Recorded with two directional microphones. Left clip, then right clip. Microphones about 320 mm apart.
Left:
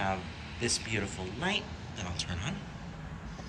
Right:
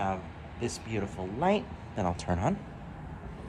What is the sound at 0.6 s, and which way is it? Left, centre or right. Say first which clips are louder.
Speech: left 2 dB; centre.